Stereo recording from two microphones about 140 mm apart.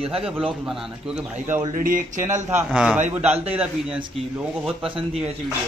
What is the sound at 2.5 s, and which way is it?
Speech, 5° right (ahead or behind).